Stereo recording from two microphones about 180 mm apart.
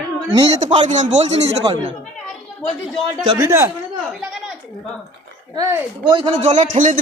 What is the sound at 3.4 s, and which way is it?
Speech, 15° right (ahead or behind).